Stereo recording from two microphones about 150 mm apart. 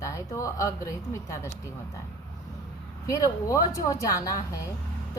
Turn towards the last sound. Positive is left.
turn(degrees=25)  # may be behind; listen again after turning